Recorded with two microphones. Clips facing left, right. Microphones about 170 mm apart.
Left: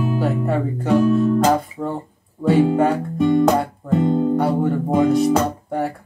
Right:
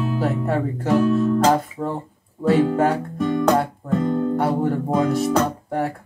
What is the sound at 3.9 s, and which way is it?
Guitar, 20° left (ahead or behind).